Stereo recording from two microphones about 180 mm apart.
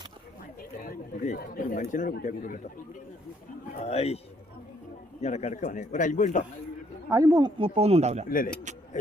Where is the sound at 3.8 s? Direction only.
35° left (ahead or behind).